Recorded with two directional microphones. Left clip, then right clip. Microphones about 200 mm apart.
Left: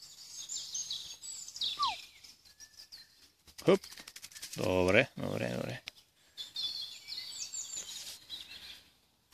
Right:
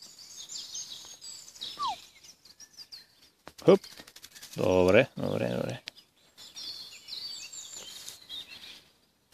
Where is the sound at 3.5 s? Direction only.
40° right (ahead or behind).